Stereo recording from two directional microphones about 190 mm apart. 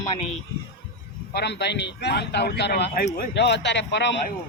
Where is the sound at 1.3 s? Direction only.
60° left (ahead or behind).